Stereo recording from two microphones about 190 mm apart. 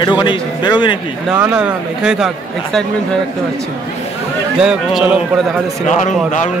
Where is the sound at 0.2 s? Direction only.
25° left (ahead or behind).